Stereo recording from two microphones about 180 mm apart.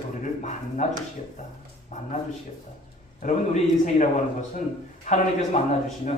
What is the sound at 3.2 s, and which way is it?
A man's voice, 45° left (ahead or behind).